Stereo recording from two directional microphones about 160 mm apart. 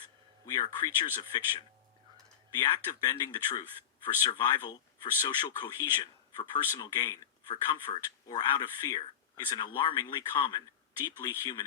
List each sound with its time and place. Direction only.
0.4 s speech: 25° left (ahead or behind)